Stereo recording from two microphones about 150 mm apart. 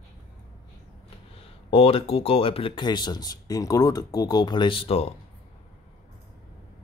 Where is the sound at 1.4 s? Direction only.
40° left (ahead or behind).